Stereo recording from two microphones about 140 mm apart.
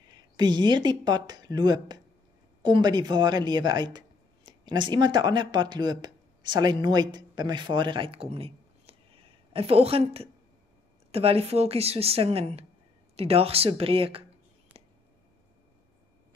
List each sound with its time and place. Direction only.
0.1 s speech: 30° right (ahead or behind)